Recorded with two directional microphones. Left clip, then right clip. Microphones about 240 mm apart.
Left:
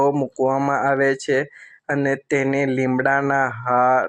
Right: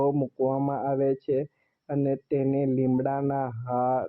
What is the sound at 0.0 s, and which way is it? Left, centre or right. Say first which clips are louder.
Speech: left 7 dB; left.